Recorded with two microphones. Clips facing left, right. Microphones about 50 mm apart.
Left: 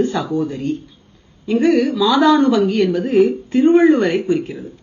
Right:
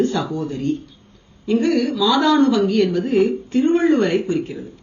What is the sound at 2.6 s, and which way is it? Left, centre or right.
Speech, centre.